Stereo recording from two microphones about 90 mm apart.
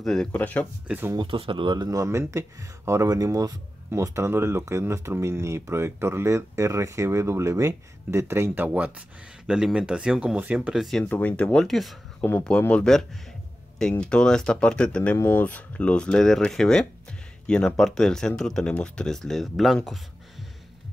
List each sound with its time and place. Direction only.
0.0 s speech: 5° left (ahead or behind)
0.3 s speech: 15° left (ahead or behind)
0.8 s speech: 20° right (ahead or behind)
1.1 s speech: 75° right (ahead or behind); by 1.9 s 60° right (ahead or behind)
1.9 s speech: 35° right (ahead or behind)
8.6 s speech: 15° right (ahead or behind)
11.1 s speech: 20° left (ahead or behind); by 11.9 s 5° left (ahead or behind)
12.2 s speech: 25° left (ahead or behind)
12.4 s speech: 15° left (ahead or behind)
15.1 s speech: 25° left (ahead or behind); by 20.0 s centre (ahead or behind)